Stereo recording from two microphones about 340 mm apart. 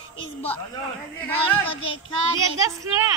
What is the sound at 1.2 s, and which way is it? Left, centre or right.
Speech, centre.